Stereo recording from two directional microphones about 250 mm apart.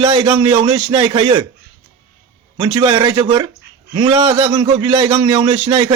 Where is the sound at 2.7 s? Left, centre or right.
Centre.